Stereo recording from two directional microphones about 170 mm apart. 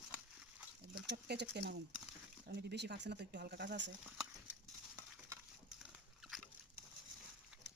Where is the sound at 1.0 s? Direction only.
80° right.